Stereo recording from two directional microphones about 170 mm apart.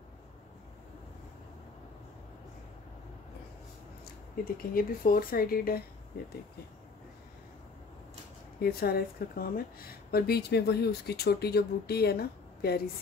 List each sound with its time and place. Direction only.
4.6 s speech: 55° left (ahead or behind)
8.5 s a woman's voice: 65° left (ahead or behind)